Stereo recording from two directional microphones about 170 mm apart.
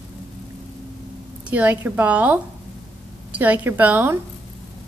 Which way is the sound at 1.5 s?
10° right (ahead or behind).